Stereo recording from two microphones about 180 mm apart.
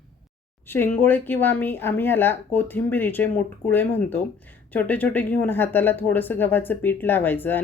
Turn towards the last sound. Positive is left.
turn(degrees=10)  # may be behind; listen again after turning